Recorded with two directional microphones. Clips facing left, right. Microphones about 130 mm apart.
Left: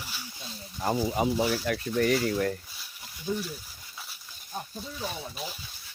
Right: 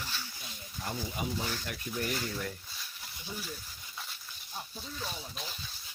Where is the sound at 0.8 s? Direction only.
80° left.